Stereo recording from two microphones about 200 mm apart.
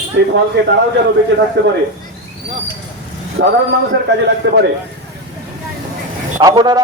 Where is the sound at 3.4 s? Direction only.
65° right (ahead or behind).